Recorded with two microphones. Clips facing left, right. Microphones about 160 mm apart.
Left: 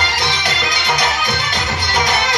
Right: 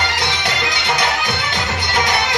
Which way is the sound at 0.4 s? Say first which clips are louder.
Even; 25° right (ahead or behind).